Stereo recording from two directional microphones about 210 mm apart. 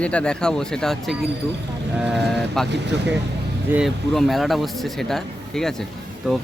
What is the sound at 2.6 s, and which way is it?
Speech, 55° right (ahead or behind).